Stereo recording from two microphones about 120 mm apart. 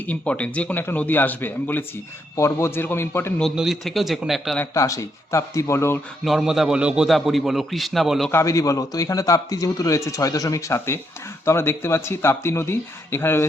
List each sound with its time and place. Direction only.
0.1 s a man's voice: 10° left (ahead or behind)
3.4 s a man's voice: 5° right (ahead or behind)
4.7 s speech: 25° left (ahead or behind)
6.2 s a man's voice: 5° right (ahead or behind)
8.3 s speech: 25° left (ahead or behind)